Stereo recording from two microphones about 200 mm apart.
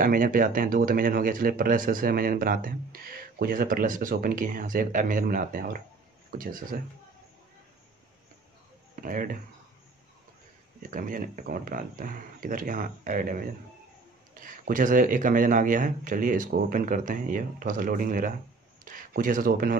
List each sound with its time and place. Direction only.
0.0 s speech: 45° right (ahead or behind)
8.9 s speech: 45° right (ahead or behind)
10.8 s speech: 40° right (ahead or behind)